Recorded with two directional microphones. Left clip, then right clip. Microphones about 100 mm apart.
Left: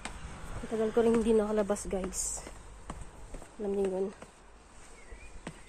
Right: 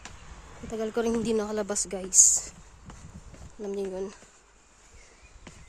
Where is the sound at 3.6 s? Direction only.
80° right.